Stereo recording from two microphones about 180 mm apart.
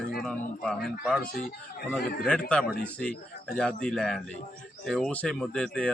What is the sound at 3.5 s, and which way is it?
Speech, 5° left (ahead or behind).